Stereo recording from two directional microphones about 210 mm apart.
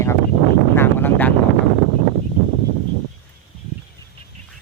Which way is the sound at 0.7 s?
10° left (ahead or behind).